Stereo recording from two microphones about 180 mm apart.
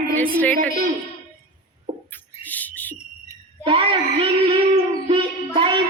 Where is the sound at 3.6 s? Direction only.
30° right (ahead or behind).